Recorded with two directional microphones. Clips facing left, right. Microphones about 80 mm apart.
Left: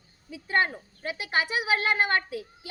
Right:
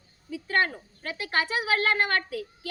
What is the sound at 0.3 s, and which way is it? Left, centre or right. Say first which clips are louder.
A woman's voice: even; centre.